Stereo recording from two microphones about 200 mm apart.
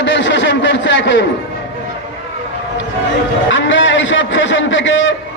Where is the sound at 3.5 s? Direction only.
70° left (ahead or behind).